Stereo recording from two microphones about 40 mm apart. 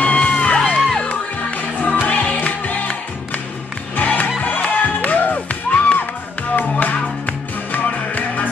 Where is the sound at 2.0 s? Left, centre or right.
Left.